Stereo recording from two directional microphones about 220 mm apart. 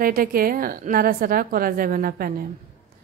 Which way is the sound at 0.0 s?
40° right (ahead or behind).